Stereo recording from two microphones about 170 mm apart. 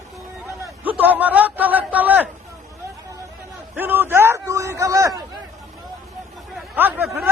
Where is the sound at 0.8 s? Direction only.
10° right (ahead or behind).